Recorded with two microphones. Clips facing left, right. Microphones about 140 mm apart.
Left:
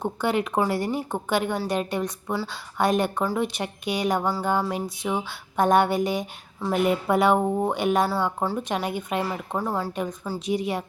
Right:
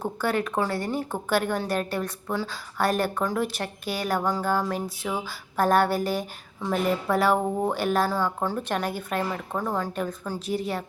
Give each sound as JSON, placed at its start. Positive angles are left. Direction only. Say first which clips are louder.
{"t": 0.0, "sound": "a woman's voice", "louder": "left 2 dB", "side_deg": 20}
{"t": 0.8, "sound": "speech", "louder": "left 2 dB", "side_deg": 5}
{"t": 1.6, "sound": "a woman's voice", "louder": "left 2 dB", "side_deg": 10}
{"t": 7.7, "sound": "a woman's voice", "louder": "left 2 dB", "side_deg": -5}